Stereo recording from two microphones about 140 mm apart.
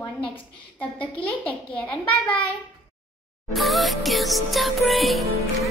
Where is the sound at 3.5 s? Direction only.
Centre (ahead or behind).